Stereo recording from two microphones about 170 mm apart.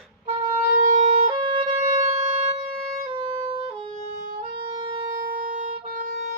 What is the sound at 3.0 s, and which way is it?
Music, 30° right (ahead or behind).